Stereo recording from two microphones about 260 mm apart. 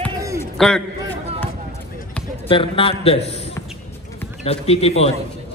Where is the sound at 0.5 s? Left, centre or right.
Centre.